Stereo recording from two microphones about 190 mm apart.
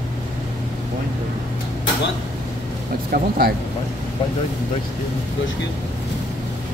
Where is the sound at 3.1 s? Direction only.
55° right (ahead or behind).